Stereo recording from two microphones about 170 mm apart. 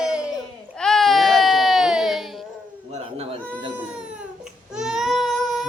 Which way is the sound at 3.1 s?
35° right (ahead or behind).